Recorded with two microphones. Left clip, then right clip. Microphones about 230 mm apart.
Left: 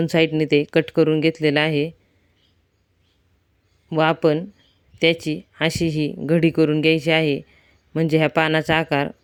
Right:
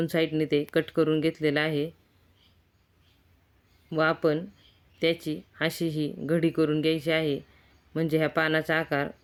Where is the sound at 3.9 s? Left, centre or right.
Left.